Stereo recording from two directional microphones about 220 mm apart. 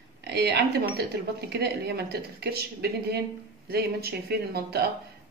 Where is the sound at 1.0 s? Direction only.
50° right (ahead or behind).